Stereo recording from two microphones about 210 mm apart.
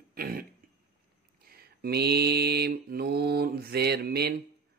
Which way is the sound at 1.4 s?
45° right (ahead or behind).